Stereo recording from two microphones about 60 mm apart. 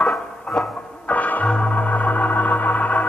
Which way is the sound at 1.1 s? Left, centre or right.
Left.